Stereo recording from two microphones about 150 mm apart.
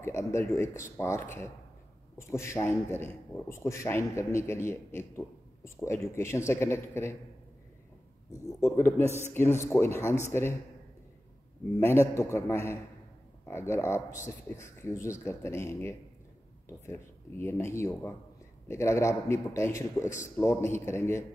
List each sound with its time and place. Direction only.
0.0 s a man's voice: 20° left (ahead or behind)
8.3 s a man's voice: 20° left (ahead or behind)
11.8 s a man's voice: 20° left (ahead or behind)